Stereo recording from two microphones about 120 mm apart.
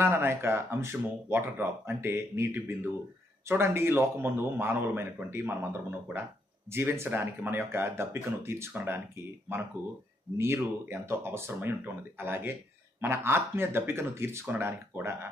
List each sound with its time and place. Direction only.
0.0 s speech: 20° right (ahead or behind)